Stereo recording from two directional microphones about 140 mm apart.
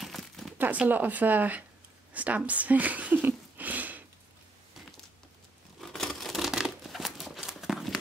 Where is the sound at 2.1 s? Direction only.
10° right (ahead or behind).